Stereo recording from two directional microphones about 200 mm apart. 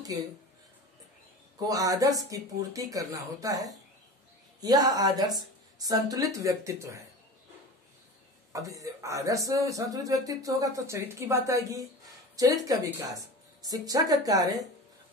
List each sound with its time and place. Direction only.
1.7 s a woman's voice: 15° right (ahead or behind)
8.5 s speech: 15° right (ahead or behind)